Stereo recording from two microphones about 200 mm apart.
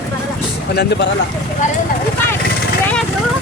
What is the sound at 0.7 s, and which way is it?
Speech, 55° left (ahead or behind).